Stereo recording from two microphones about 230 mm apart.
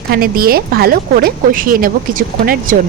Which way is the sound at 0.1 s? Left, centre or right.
Right.